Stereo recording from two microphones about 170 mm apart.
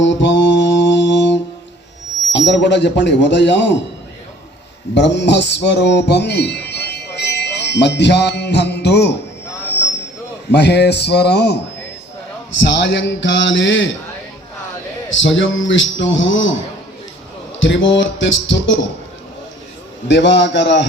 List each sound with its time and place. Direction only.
0.0 s mantra: 90° left
2.3 s speech: 90° left
4.9 s speech: 90° left
10.5 s a man's voice: 80° left
12.5 s speech: 90° left
15.1 s speech: 90° left
17.6 s speech: 90° left
20.1 s speech: 90° left